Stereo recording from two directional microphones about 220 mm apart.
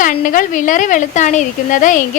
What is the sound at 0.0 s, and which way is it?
A woman's voice, 35° left (ahead or behind).